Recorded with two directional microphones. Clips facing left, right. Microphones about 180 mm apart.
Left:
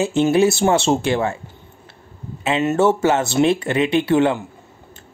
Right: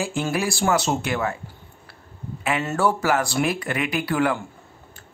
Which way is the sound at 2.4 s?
25° left (ahead or behind).